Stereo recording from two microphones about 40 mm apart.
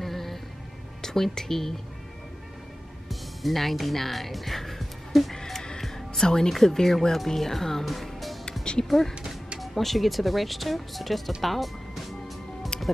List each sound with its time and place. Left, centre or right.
0.0 s music: centre
1.0 s speech: centre
3.1 s speech: centre
5.3 s music: centre
6.5 s speech: centre
7.9 s music: centre
8.8 s speech: centre
12.7 s music: centre